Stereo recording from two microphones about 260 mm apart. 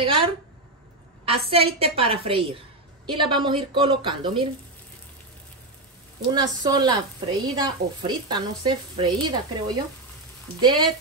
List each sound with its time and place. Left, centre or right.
0.0 s a sound: centre
1.2 s a woman's voice: right
6.2 s a woman's voice: centre